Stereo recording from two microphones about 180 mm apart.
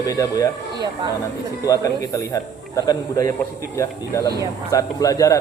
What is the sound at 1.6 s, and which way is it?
A man's voice, 20° left (ahead or behind).